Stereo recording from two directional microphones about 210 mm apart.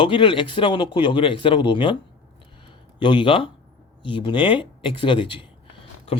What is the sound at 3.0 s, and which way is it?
Speech, 20° left (ahead or behind).